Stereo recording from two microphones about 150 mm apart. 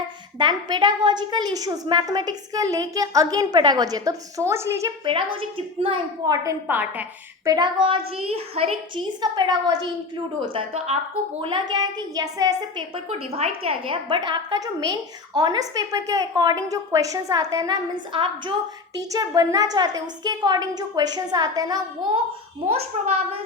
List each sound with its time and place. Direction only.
0.3 s a woman's voice: 30° right (ahead or behind)
5.0 s a child's voice: 35° right (ahead or behind)
6.2 s a woman's voice: 25° right (ahead or behind)
7.4 s a child's voice: 25° right (ahead or behind)
9.2 s a woman's voice: 25° right (ahead or behind)
13.1 s a woman's voice: 45° right (ahead or behind); by 22.2 s 25° right (ahead or behind)
22.7 s a child's voice: 45° right (ahead or behind)